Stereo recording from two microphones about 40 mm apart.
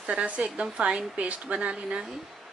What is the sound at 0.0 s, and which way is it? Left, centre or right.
A woman's voice, right.